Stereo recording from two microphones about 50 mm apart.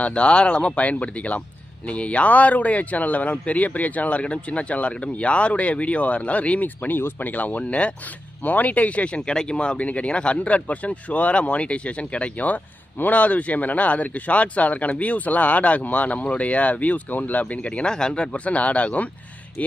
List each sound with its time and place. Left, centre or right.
0.0 s speech: left